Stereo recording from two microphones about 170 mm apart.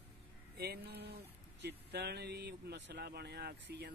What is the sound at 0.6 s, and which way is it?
Speech, 70° right (ahead or behind).